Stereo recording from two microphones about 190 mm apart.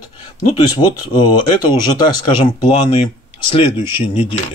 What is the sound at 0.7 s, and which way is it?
Speech, 25° left (ahead or behind).